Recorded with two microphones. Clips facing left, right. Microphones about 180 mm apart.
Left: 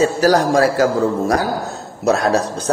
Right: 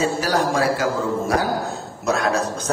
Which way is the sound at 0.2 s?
40° left (ahead or behind).